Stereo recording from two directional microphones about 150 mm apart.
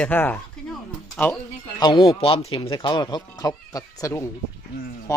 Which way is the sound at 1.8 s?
30° left (ahead or behind).